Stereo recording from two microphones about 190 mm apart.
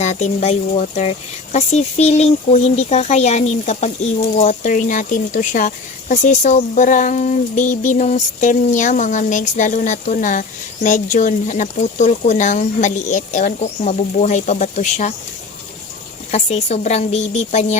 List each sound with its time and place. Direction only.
0.0 s speech: 40° left (ahead or behind)
16.3 s speech: 35° left (ahead or behind)